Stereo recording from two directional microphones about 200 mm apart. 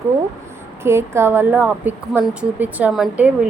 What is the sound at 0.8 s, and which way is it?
A woman's voice, 10° right (ahead or behind).